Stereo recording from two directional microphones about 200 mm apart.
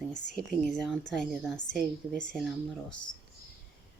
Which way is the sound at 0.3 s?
Centre (ahead or behind).